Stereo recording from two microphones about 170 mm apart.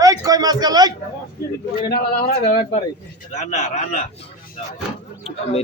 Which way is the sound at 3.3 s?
45° left (ahead or behind).